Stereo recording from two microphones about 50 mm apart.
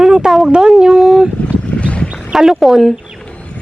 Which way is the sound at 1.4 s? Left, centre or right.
Left.